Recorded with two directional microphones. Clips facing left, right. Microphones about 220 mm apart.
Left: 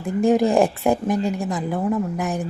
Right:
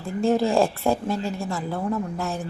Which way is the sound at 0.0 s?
15° left (ahead or behind).